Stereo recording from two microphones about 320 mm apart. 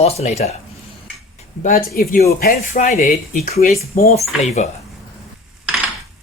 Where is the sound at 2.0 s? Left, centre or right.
Left.